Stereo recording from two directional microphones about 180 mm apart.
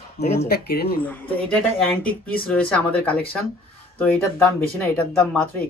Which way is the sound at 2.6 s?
5° left (ahead or behind).